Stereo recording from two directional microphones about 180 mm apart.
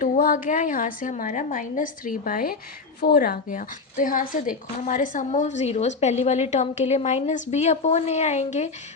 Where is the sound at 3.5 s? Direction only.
45° left (ahead or behind).